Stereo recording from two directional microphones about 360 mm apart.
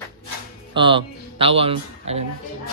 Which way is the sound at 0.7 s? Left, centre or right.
Centre.